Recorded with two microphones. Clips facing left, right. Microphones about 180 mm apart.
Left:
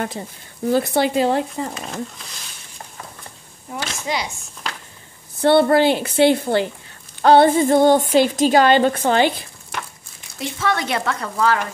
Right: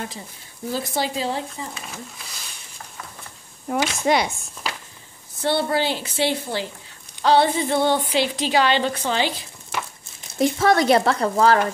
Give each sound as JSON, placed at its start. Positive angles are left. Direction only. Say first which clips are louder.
{"t": 0.7, "sound": "speech", "louder": "left 8 dB", "side_deg": 60}
{"t": 3.7, "sound": "speech", "louder": "right 6 dB", "side_deg": -55}
{"t": 5.4, "sound": "a woman's voice", "louder": "left 8 dB", "side_deg": 60}
{"t": 10.4, "sound": "speech", "louder": "right 6 dB", "side_deg": -40}